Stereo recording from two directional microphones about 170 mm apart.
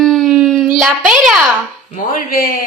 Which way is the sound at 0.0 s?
Centre (ahead or behind).